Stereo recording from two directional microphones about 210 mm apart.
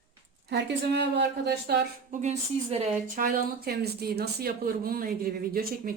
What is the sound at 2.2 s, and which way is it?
Speech, 30° right (ahead or behind).